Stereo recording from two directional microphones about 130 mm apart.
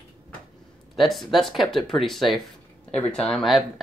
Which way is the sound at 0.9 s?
Centre (ahead or behind).